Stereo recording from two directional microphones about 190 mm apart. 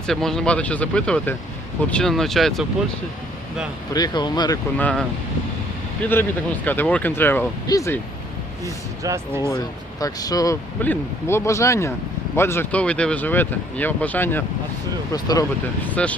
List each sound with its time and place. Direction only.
0.1 s speech: centre (ahead or behind)
3.9 s speech: 20° left (ahead or behind)
4.8 s speech: 5° left (ahead or behind)
8.6 s speech: 15° right (ahead or behind)
9.4 s speech: 15° left (ahead or behind)
16.0 s speech: 5° left (ahead or behind)